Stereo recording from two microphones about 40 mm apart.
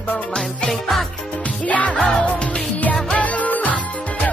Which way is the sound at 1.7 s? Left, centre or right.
Left.